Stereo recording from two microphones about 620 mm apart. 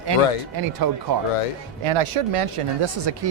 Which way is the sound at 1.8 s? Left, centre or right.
Right.